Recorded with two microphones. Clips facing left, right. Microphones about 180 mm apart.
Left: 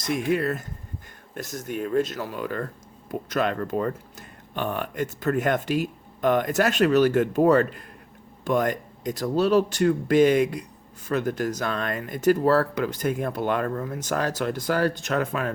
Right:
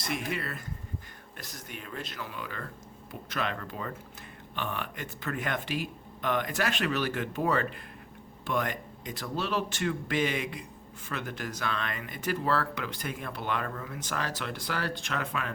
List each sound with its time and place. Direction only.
0.3 s speech: 45° left (ahead or behind)